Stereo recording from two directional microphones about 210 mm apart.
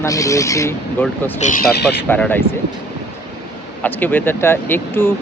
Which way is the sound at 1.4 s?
35° left (ahead or behind).